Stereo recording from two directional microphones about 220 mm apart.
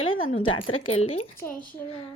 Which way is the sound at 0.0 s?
65° left (ahead or behind).